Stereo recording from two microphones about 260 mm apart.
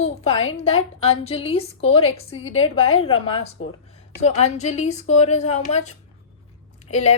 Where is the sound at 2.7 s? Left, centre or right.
Left.